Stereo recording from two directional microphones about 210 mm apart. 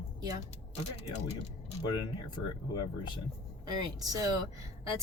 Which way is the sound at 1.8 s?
20° left (ahead or behind).